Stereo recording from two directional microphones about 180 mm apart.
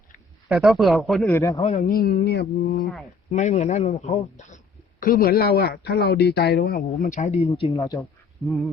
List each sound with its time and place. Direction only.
0.4 s speech: centre (ahead or behind)
1.3 s a man's voice: 15° left (ahead or behind)
1.8 s mantra: 55° left (ahead or behind)
3.3 s a man's voice: 40° left (ahead or behind)
7.8 s a man's voice: 15° left (ahead or behind)
8.4 s speech: centre (ahead or behind)